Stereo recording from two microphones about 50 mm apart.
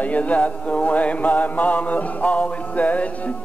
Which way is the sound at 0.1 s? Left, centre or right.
Left.